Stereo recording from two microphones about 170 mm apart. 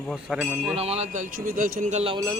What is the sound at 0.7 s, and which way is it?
Speech, 35° right (ahead or behind).